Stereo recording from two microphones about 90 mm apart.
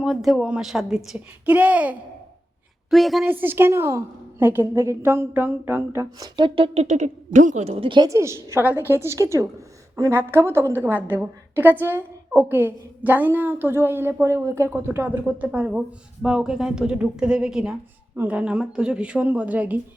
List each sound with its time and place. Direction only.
0.0 s a child's voice: 5° right (ahead or behind)
2.9 s a woman's voice: centre (ahead or behind)
3.2 s a woman's voice: 25° right (ahead or behind)
6.1 s speech: 45° right (ahead or behind)
7.8 s a woman's voice: 65° right (ahead or behind)
8.0 s a woman's voice: 35° right (ahead or behind); by 19.8 s 20° right (ahead or behind)